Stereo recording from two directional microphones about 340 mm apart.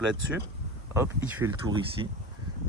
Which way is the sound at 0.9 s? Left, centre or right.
Centre.